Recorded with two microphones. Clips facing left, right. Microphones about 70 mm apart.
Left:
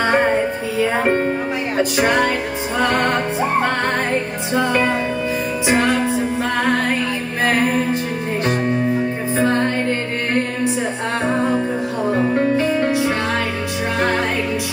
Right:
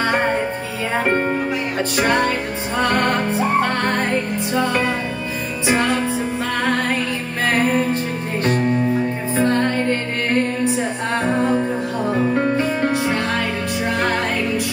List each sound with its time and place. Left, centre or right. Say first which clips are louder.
1.8 s music: left 2 dB; centre
4.6 s music: left 2 dB; left
8.5 s music: right 1 dB; centre